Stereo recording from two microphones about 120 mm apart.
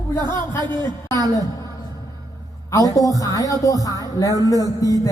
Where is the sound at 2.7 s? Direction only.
30° left (ahead or behind).